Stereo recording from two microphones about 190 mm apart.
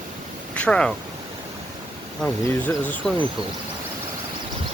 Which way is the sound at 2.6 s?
10° left (ahead or behind).